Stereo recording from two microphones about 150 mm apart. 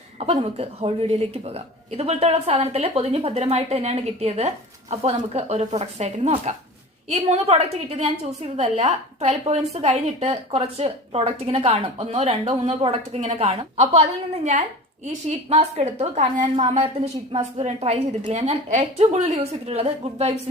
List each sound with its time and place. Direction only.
0.2 s a woman's voice: 45° right (ahead or behind)